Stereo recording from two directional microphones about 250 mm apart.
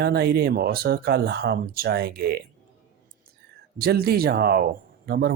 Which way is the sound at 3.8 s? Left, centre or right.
Right.